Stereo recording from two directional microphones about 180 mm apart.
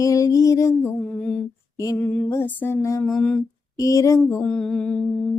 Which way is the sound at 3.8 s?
20° left (ahead or behind).